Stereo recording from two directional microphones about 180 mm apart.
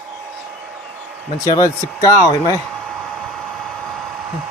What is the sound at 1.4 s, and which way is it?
Speech, 20° left (ahead or behind).